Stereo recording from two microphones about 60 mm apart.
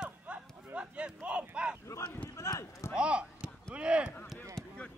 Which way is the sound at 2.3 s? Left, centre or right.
Left.